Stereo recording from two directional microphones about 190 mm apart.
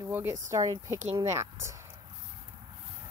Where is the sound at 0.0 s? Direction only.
10° right (ahead or behind).